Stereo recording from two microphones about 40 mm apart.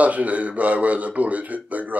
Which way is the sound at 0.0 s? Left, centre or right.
Right.